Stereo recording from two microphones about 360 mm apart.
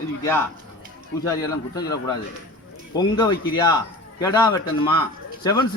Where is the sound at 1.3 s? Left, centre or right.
Centre.